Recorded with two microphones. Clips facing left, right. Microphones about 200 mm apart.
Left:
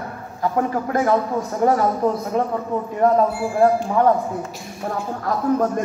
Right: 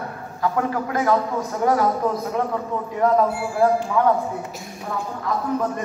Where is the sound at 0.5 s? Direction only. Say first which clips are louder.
Left 4 dB; 30° left (ahead or behind).